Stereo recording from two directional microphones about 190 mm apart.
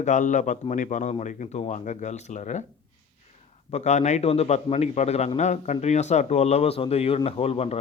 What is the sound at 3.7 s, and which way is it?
A man's voice, 35° left (ahead or behind).